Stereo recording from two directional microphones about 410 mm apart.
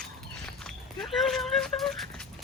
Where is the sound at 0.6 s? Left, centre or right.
Centre.